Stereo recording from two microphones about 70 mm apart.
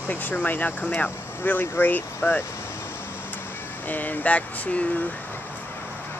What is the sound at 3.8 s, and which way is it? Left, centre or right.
Speech, left.